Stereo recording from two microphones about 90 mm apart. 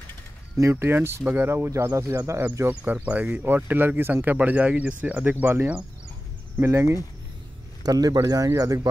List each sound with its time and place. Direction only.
0.6 s speech: 30° right (ahead or behind)
2.7 s speech: 15° right (ahead or behind)
7.8 s speech: 45° right (ahead or behind)